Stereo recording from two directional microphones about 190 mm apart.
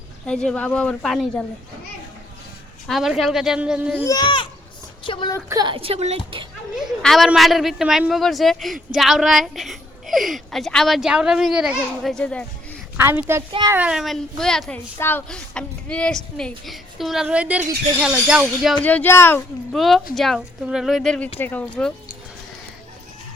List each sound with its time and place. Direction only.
0.3 s a woman's voice: 5° left (ahead or behind)
2.8 s a woman's voice: centre (ahead or behind)
4.0 s speech: 20° left (ahead or behind)
5.5 s a woman's voice: 20° right (ahead or behind)
6.7 s a woman's voice: centre (ahead or behind)
13.0 s a child's voice: 10° right (ahead or behind)
13.5 s a woman's voice: 25° right (ahead or behind)
13.7 s a woman's voice: 5° right (ahead or behind)
18.8 s speech: 10° left (ahead or behind)
19.7 s a woman's voice: centre (ahead or behind)